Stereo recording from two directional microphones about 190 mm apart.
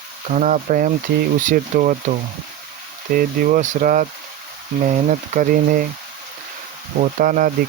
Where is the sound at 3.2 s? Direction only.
45° right (ahead or behind).